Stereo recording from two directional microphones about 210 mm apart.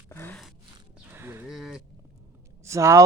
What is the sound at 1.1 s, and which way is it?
Livestock, 10° right (ahead or behind).